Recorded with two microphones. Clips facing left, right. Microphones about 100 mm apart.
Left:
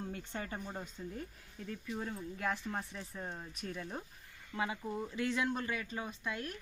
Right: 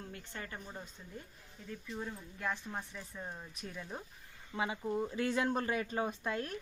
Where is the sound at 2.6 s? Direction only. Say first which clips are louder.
Left 2 dB; 5° right (ahead or behind).